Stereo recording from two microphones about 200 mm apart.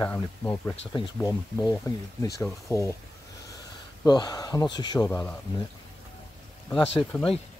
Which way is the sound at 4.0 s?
20° left (ahead or behind).